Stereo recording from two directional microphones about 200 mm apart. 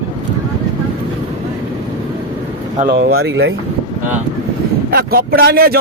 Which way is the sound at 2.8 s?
50° right (ahead or behind).